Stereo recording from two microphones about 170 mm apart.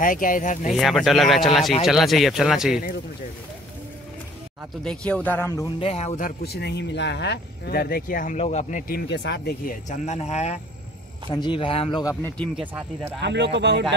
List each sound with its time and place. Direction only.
0.0 s speech: 50° left (ahead or behind)
0.7 s speech: centre (ahead or behind)
4.8 s a man's voice: 5° left (ahead or behind)
5.8 s speech: 35° left (ahead or behind)
6.4 s speech: 75° left (ahead or behind); by 8.4 s 55° left (ahead or behind)
8.4 s speech: 40° left (ahead or behind)
8.9 s speech: 90° left; by 9.8 s 70° left (ahead or behind)
9.8 s speech: 40° left (ahead or behind)
11.2 s speech: 25° left (ahead or behind)
12.0 s speech: 20° left (ahead or behind)
13.2 s speech: 90° right